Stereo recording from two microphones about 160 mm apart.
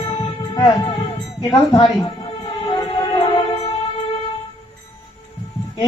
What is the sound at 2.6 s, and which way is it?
Music, 25° left (ahead or behind).